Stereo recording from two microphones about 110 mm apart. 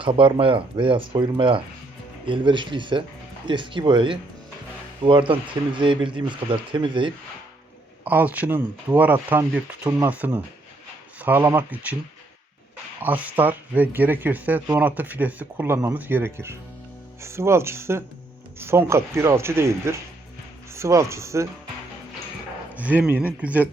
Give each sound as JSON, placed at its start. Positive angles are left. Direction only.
{"t": 0.0, "sound": "speech", "side_deg": -50}
{"t": 8.0, "sound": "speech", "side_deg": -15}
{"t": 13.0, "sound": "a man's voice", "side_deg": -15}
{"t": 22.7, "sound": "speech", "side_deg": -15}